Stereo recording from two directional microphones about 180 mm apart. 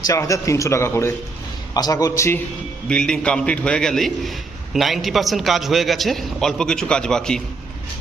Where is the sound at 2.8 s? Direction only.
5° left (ahead or behind).